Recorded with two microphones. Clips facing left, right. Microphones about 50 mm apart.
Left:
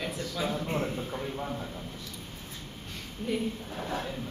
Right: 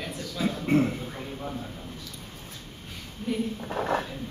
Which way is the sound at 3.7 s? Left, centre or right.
Right.